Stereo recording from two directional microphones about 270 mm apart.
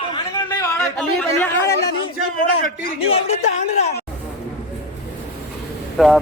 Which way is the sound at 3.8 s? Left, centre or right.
Left.